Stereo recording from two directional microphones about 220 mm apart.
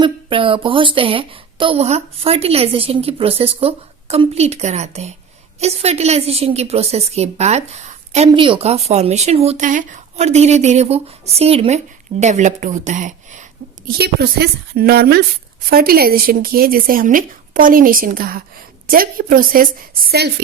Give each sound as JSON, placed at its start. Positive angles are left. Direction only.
{"t": 0.0, "sound": "a woman's voice", "side_deg": -25}
{"t": 13.8, "sound": "a woman's voice", "side_deg": -45}